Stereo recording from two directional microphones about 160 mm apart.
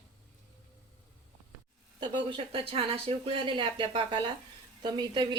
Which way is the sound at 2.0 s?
30° right (ahead or behind).